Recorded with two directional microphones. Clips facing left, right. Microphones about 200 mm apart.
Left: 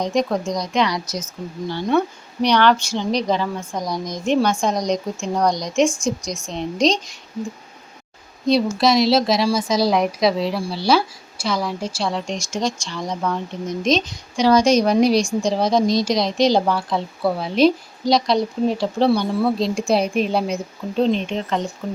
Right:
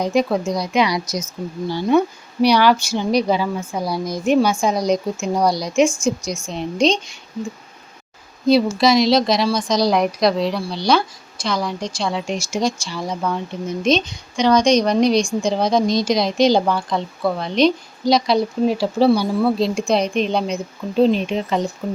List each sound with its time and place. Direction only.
0.0 s a woman's voice: 5° right (ahead or behind)
6.2 s a woman's voice: 35° left (ahead or behind)
6.8 s a woman's voice: centre (ahead or behind)
8.8 s a woman's voice: centre (ahead or behind)